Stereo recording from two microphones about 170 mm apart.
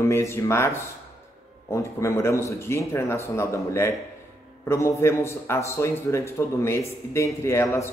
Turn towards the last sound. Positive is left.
turn(degrees=15)  # may be behind; listen again after turning